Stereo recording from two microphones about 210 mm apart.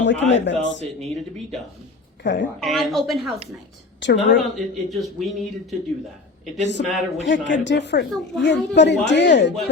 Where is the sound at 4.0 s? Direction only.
55° left (ahead or behind).